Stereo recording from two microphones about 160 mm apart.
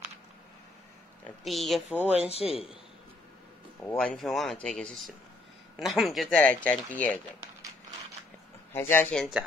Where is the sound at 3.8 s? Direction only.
10° left (ahead or behind).